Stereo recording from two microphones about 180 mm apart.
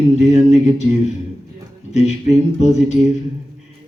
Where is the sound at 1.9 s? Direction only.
40° left (ahead or behind).